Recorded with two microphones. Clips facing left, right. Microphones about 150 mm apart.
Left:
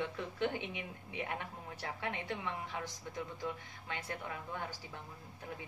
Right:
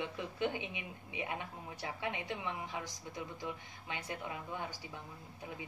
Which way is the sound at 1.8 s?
15° right (ahead or behind).